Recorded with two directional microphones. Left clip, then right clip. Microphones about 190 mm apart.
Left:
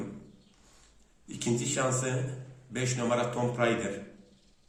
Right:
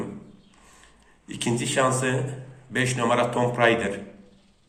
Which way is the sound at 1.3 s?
5° left (ahead or behind).